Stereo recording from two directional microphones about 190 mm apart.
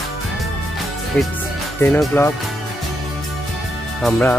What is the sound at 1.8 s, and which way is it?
Speech, 10° left (ahead or behind).